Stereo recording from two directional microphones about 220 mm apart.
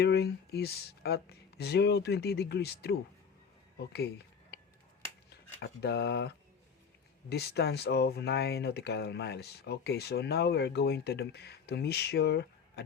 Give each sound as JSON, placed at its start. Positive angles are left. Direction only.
{"t": 0.0, "sound": "speech", "side_deg": 45}
{"t": 4.5, "sound": "finger snapping", "side_deg": 50}
{"t": 5.3, "sound": "speech", "side_deg": 50}